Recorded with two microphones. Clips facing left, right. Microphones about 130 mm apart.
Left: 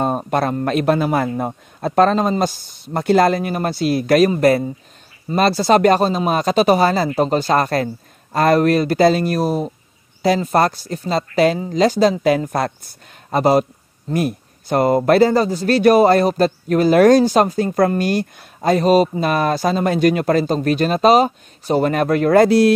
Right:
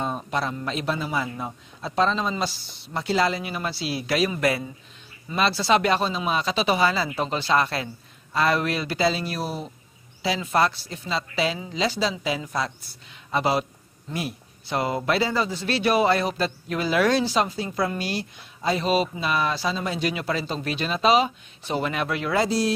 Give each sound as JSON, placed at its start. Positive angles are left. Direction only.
{"t": 0.0, "sound": "speech", "side_deg": 55}